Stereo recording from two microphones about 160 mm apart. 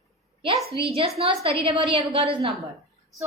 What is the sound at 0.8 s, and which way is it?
A woman's voice, 35° right (ahead or behind).